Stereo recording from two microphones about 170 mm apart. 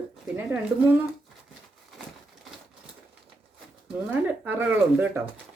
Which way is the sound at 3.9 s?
10° right (ahead or behind).